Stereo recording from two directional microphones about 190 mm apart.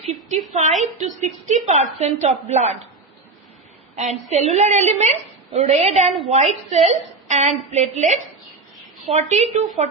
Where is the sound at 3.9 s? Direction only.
35° right (ahead or behind).